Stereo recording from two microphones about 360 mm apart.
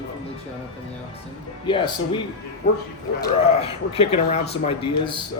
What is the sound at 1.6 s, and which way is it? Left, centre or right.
Speech, centre.